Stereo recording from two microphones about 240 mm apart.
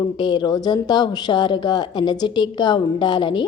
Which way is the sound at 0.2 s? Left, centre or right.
Centre.